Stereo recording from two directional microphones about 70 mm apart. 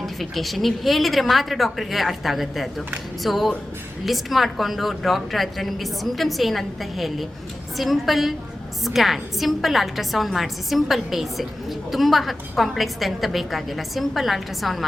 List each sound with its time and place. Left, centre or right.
0.0 s a woman's voice: centre